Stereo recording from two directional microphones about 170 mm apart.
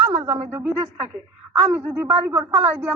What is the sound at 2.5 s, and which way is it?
Speech, 35° right (ahead or behind).